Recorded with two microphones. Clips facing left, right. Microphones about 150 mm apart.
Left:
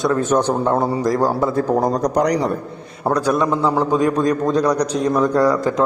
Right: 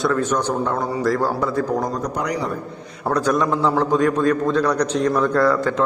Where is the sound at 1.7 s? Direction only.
35° left (ahead or behind).